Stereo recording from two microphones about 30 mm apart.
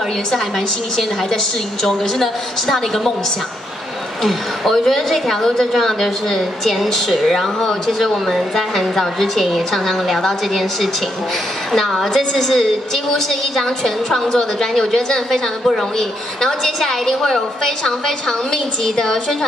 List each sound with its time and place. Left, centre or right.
1.8 s a woman's voice: centre
4.2 s a woman's voice: centre